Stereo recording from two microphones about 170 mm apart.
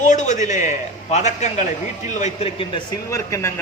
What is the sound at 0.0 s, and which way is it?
A man's voice, 45° left (ahead or behind).